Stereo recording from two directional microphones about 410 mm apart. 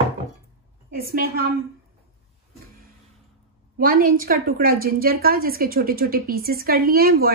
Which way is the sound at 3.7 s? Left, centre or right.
Right.